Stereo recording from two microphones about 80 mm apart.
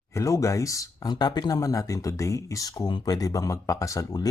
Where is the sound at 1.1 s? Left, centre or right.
Left.